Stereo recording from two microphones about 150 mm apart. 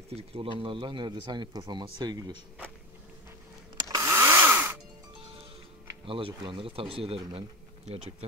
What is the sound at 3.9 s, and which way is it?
Chainsaw, 20° right (ahead or behind).